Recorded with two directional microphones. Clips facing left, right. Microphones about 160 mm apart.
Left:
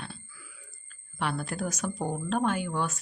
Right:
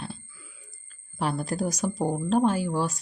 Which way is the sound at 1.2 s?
40° right (ahead or behind).